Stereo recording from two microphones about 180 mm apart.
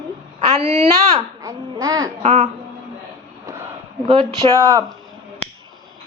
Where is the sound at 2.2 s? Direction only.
40° right (ahead or behind).